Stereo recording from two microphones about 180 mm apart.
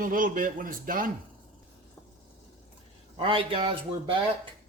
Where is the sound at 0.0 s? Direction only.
50° right (ahead or behind).